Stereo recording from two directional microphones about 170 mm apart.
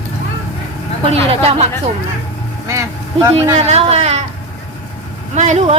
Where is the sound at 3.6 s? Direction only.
40° right (ahead or behind).